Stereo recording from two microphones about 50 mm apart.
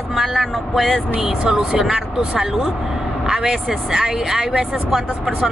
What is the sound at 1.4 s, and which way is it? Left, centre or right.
Speech, centre.